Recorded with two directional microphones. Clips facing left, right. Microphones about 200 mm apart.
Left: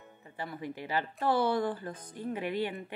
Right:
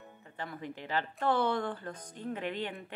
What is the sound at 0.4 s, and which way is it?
Speech, 10° left (ahead or behind).